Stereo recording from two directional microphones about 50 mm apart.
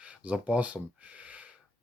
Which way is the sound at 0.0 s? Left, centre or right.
Right.